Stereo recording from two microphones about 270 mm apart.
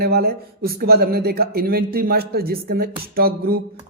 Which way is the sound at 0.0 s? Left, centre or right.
Right.